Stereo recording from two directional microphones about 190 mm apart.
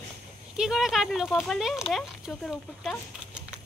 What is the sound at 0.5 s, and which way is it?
Speech, 5° right (ahead or behind).